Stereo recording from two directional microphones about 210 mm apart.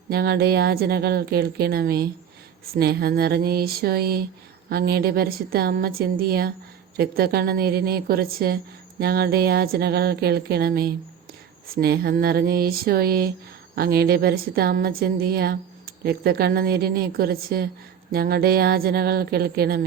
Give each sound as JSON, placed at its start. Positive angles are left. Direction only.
{"t": 0.1, "sound": "speech", "side_deg": -45}